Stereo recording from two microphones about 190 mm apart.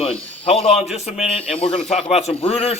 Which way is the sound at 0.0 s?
30° left (ahead or behind).